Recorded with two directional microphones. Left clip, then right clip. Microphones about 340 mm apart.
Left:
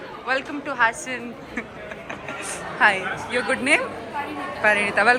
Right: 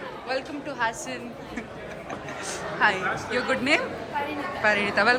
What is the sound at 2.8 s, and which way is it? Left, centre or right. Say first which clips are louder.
A woman's voice: left 4 dB; centre.